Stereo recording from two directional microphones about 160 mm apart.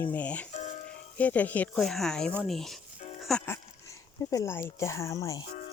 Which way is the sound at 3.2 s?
5° left (ahead or behind).